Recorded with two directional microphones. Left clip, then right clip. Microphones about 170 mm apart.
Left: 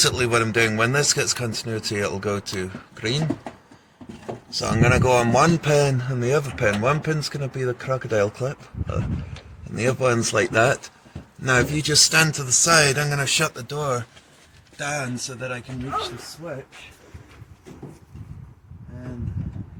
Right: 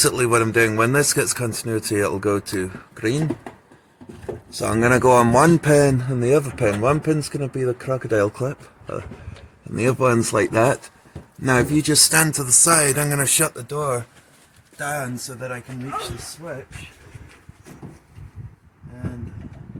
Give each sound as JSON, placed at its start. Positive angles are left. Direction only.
{"t": 0.0, "sound": "speech", "side_deg": -65}
{"t": 4.5, "sound": "speech", "side_deg": -55}
{"t": 5.0, "sound": "speech", "side_deg": -45}
{"t": 5.3, "sound": "speech", "side_deg": -60}
{"t": 13.7, "sound": "speech", "side_deg": -30}
{"t": 14.8, "sound": "speech", "side_deg": -5}